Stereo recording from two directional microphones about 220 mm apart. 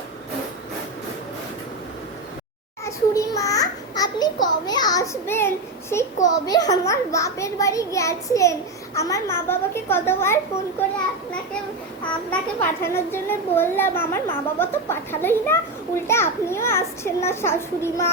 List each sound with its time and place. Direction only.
2.8 s a sound: 15° left (ahead or behind)
6.2 s a child's voice: 15° left (ahead or behind)
12.3 s a child's voice: 10° left (ahead or behind)